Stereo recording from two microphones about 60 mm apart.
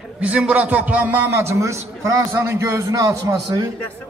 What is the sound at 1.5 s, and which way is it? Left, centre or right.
A man's voice, right.